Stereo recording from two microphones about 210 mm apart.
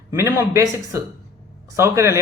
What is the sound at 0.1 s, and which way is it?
A man's voice, 10° right (ahead or behind).